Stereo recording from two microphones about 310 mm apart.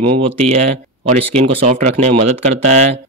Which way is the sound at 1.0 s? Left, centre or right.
Centre.